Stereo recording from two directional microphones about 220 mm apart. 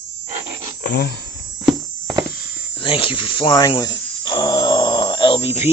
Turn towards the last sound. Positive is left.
turn(degrees=25)  # may be behind; listen again after turning